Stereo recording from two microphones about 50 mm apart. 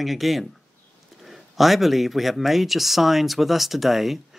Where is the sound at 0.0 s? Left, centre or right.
Centre.